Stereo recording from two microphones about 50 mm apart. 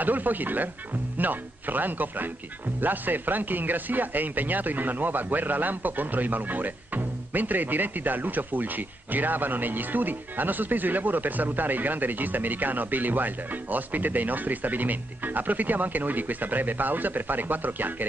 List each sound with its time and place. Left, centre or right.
0.0 s speech: right